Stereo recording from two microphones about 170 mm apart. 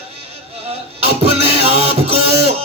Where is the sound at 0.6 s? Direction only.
35° right (ahead or behind).